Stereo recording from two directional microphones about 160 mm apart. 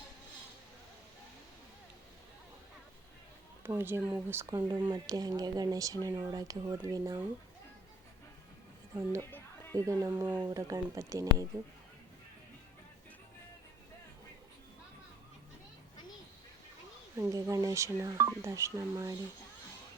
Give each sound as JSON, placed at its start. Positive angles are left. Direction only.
{"t": 3.6, "sound": "speech", "side_deg": -15}
{"t": 4.5, "sound": "speech", "side_deg": -30}
{"t": 9.7, "sound": "speech", "side_deg": -20}
{"t": 17.2, "sound": "speech", "side_deg": -20}